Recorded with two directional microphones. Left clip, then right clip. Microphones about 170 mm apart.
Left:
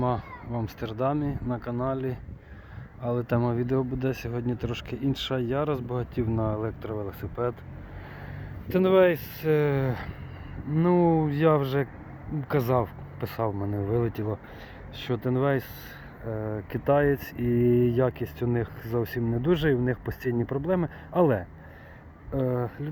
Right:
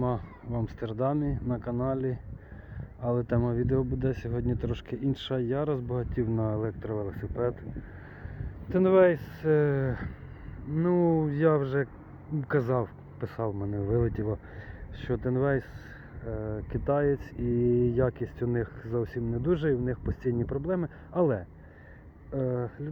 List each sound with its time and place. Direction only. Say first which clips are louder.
0.0 s speech: left 3 dB; centre (ahead or behind)
8.7 s speech: left 1 dB; 15° left (ahead or behind)
10.8 s speech: left 3 dB; 25° left (ahead or behind)
13.5 s speech: left 3 dB; 25° left (ahead or behind)
13.8 s speech: even; 10° left (ahead or behind)
16.2 s speech: left 3 dB; 25° left (ahead or behind)